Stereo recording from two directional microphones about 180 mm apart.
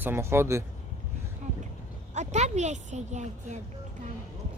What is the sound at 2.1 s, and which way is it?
A woman's voice, 40° right (ahead or behind).